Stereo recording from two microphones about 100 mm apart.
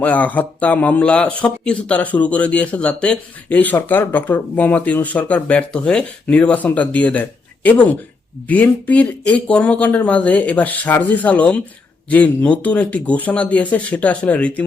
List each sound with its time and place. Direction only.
0.0 s speech: 15° left (ahead or behind)